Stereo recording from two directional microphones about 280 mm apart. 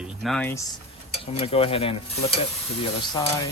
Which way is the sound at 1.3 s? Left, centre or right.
Left.